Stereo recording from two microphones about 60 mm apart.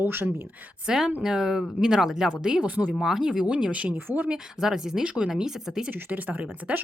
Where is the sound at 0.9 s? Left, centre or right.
Centre.